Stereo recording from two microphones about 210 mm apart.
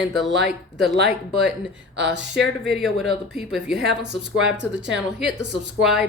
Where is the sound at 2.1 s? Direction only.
55° right (ahead or behind).